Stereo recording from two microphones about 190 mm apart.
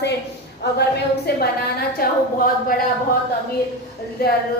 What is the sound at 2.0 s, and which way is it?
Speech, 50° left (ahead or behind).